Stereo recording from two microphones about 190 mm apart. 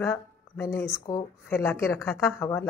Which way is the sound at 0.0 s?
15° left (ahead or behind).